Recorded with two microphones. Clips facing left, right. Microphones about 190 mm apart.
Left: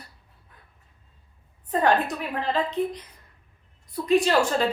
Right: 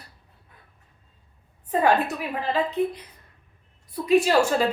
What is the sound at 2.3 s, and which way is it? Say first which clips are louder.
Speech: even; 5° right (ahead or behind).